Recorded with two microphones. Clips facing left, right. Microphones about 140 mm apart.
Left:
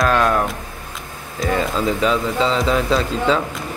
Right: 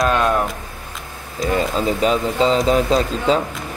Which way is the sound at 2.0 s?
40° right (ahead or behind).